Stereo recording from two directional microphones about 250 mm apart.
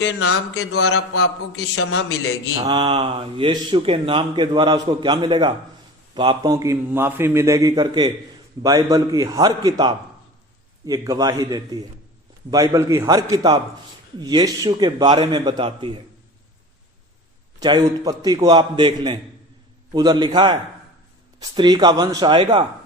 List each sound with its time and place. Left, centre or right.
0.0 s a man's voice: left
2.6 s a man's voice: centre
17.6 s a man's voice: centre